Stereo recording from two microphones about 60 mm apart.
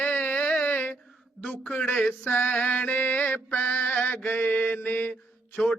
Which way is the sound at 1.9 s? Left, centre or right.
Centre.